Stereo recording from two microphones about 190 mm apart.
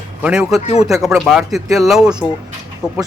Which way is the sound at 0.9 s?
Centre (ahead or behind).